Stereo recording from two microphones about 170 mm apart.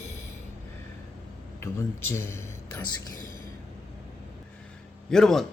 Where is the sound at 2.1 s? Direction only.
15° left (ahead or behind).